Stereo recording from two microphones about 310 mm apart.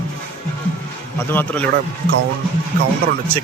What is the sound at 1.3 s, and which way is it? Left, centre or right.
Speech, centre.